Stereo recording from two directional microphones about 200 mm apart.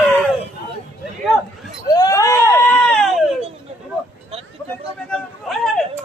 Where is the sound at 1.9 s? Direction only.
15° left (ahead or behind).